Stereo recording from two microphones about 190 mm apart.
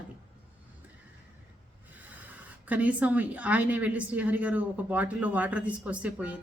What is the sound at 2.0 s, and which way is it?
Speech, 10° right (ahead or behind).